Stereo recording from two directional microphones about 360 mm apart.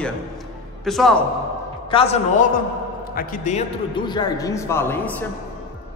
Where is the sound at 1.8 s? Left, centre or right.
Centre.